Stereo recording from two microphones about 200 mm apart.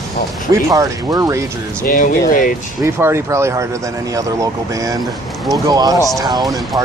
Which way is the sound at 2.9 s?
10° right (ahead or behind).